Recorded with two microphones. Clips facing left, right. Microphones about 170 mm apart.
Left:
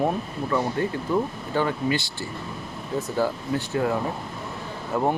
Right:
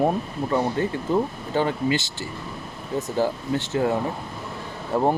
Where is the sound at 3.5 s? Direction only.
25° right (ahead or behind).